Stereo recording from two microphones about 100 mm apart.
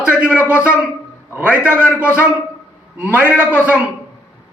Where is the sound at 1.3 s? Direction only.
20° right (ahead or behind).